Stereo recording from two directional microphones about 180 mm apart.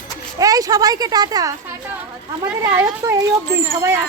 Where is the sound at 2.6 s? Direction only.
15° right (ahead or behind).